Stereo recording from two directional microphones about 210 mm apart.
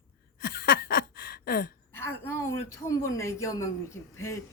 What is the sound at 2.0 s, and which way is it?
A woman's voice, 10° left (ahead or behind).